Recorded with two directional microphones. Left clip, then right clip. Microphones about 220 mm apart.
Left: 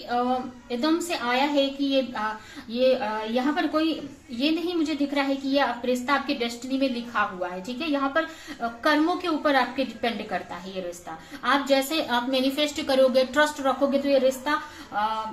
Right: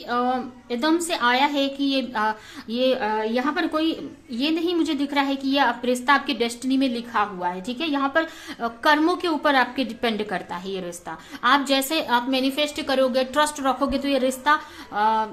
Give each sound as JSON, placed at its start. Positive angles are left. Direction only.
{"t": 0.7, "sound": "a woman's voice", "side_deg": -45}